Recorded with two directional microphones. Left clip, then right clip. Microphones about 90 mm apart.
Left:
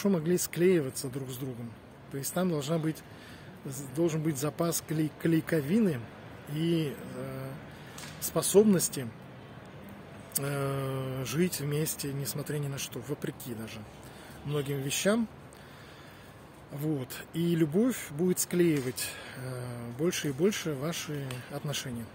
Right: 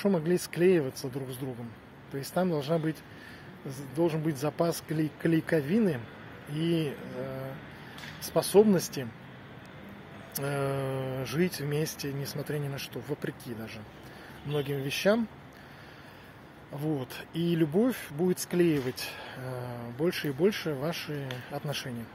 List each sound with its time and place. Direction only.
0.2 s a man's voice: 10° left (ahead or behind)
2.4 s speech: 15° left (ahead or behind)
4.0 s speech: 15° left (ahead or behind)
10.3 s speech: 15° left (ahead or behind)
16.7 s speech: 20° left (ahead or behind)